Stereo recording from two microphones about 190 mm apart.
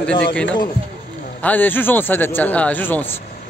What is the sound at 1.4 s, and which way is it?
A man's voice, 10° left (ahead or behind).